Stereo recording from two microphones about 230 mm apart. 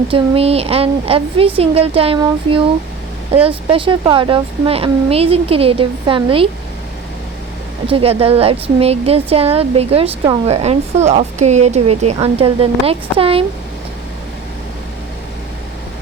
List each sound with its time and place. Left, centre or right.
0.1 s a woman's voice: right
7.9 s a woman's voice: right